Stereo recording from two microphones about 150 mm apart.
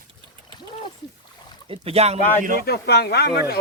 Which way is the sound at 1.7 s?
40° right (ahead or behind).